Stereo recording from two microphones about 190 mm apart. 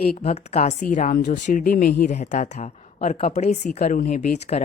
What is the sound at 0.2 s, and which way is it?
A woman's voice, 35° left (ahead or behind).